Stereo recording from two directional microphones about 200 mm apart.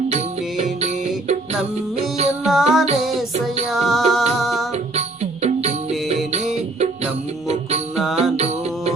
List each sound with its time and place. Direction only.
0.1 s music: 35° right (ahead or behind)
2.4 s music: centre (ahead or behind)
4.7 s music: 30° right (ahead or behind)
8.1 s music: 30° right (ahead or behind)